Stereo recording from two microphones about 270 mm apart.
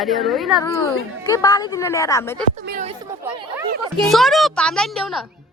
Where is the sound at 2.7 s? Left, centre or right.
Right.